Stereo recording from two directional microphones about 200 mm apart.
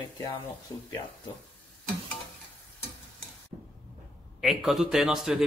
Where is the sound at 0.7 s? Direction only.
15° left (ahead or behind).